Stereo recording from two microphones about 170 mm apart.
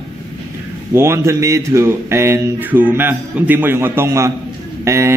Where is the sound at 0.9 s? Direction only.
15° right (ahead or behind).